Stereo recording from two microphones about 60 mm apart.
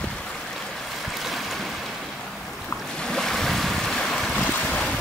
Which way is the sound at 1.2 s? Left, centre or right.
Centre.